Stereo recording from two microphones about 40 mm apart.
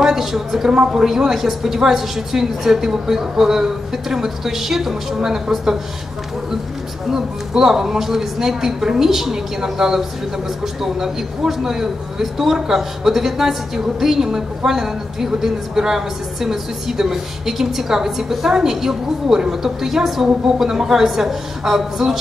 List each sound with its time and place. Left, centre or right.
0.0 s a woman's voice: centre
0.7 s speech: centre
1.0 s a man's voice: centre
7.1 s a man's voice: centre